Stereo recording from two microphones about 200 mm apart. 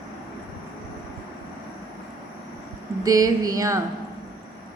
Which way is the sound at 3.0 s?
15° right (ahead or behind).